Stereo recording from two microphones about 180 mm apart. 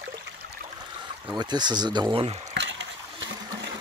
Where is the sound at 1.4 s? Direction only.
25° right (ahead or behind).